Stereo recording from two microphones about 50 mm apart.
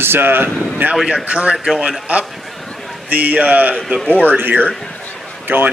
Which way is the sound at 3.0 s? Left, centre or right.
Right.